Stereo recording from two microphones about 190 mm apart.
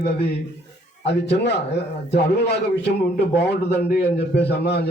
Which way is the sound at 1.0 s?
65° left (ahead or behind).